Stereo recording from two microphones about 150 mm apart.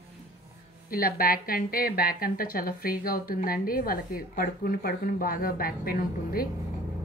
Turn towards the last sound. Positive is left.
turn(degrees=75)  # may be behind; listen again after turning